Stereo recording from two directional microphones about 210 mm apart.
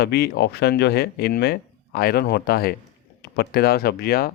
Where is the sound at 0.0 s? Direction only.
50° left (ahead or behind).